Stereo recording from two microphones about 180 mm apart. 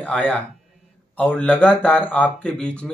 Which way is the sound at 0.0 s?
10° left (ahead or behind).